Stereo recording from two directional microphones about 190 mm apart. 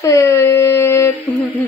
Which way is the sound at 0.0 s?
15° left (ahead or behind).